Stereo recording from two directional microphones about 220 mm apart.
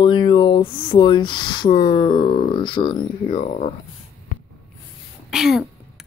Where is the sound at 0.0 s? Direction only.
20° left (ahead or behind).